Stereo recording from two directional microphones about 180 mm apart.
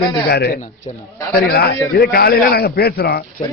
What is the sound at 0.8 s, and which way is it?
Speech, 30° left (ahead or behind).